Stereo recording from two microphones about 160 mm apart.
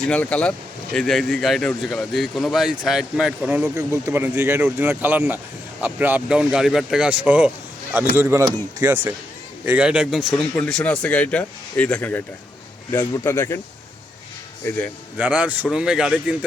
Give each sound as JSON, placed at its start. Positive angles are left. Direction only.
{"t": 0.0, "sound": "a man's voice", "side_deg": 10}
{"t": 3.8, "sound": "speech", "side_deg": -20}
{"t": 9.6, "sound": "a man's voice", "side_deg": -10}
{"t": 14.6, "sound": "a man's voice", "side_deg": 15}
{"t": 15.2, "sound": "speech", "side_deg": -10}